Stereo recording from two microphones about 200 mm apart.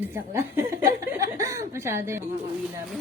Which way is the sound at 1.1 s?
15° right (ahead or behind).